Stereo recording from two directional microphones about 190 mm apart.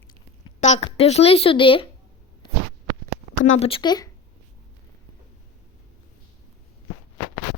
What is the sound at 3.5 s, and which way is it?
Speech, 30° left (ahead or behind).